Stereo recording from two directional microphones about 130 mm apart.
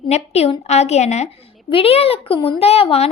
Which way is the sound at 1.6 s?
45° left (ahead or behind).